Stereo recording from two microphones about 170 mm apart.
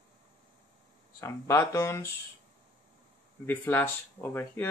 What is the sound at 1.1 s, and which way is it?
Speech, 15° left (ahead or behind).